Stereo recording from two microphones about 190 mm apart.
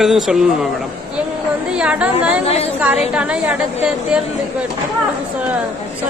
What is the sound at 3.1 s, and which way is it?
A man's voice, 5° right (ahead or behind).